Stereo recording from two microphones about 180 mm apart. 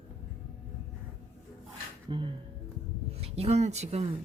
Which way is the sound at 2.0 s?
25° right (ahead or behind).